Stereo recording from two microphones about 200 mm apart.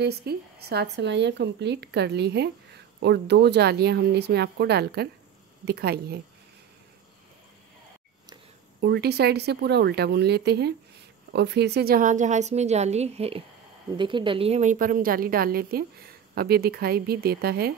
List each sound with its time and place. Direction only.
0.0 s speech: 55° right (ahead or behind)
8.8 s a woman's voice: 55° right (ahead or behind)